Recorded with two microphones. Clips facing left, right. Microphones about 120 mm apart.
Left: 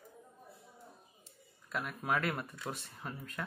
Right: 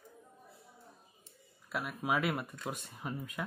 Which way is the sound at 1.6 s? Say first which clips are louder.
Right 1 dB; 5° right (ahead or behind).